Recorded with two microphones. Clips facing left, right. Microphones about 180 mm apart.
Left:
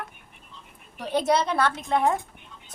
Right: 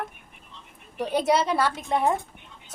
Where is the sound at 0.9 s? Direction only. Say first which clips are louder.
Right 1 dB; 10° right (ahead or behind).